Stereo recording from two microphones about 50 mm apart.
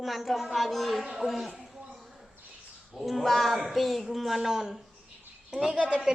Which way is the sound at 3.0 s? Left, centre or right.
Centre.